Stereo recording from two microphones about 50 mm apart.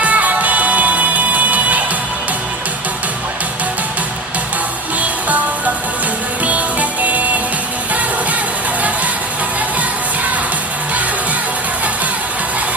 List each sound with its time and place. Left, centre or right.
0.0 s music: right
6.4 s music: right